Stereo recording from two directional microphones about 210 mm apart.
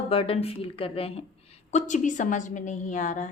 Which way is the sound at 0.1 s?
25° left (ahead or behind).